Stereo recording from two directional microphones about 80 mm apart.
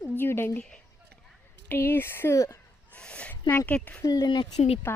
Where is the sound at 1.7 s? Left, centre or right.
Left.